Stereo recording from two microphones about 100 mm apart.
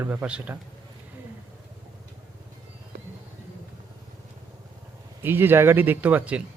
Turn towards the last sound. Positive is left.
turn(degrees=-15)  # may be behind; listen again after turning